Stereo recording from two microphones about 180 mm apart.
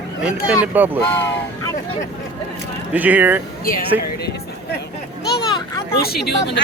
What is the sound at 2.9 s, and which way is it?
Speech, 10° right (ahead or behind).